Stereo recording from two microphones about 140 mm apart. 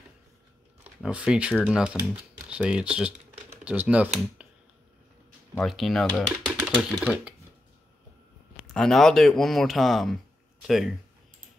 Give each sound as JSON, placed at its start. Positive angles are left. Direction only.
{"t": 1.0, "sound": "speech", "side_deg": -5}
{"t": 5.6, "sound": "speech", "side_deg": 0}
{"t": 8.7, "sound": "speech", "side_deg": 5}